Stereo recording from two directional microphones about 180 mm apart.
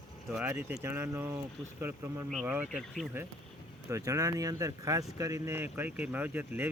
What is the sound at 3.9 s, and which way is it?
Speech, 15° right (ahead or behind).